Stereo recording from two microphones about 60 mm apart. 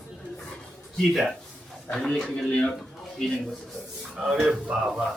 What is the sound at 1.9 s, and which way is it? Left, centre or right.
Speech, centre.